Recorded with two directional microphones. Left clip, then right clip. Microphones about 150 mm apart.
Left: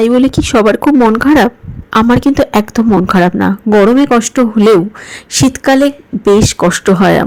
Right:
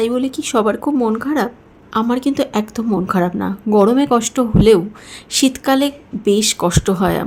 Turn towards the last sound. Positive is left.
turn(degrees=40)  # may be behind; listen again after turning